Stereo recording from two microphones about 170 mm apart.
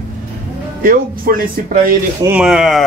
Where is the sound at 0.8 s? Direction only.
55° right (ahead or behind).